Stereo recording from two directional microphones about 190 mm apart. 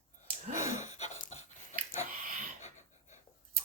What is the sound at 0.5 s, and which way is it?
Gasp, 15° right (ahead or behind).